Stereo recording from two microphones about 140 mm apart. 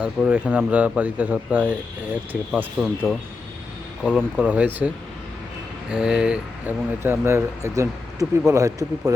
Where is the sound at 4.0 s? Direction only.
5° right (ahead or behind); by 9.1 s 25° right (ahead or behind).